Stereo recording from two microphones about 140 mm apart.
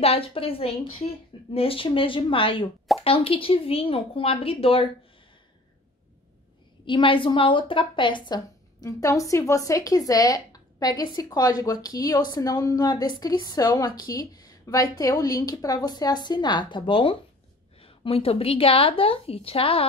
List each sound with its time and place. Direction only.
0.0 s a woman's voice: 45° left (ahead or behind)
6.9 s a woman's voice: 35° left (ahead or behind)
8.8 s a woman's voice: 25° left (ahead or behind); by 19.9 s 45° left (ahead or behind)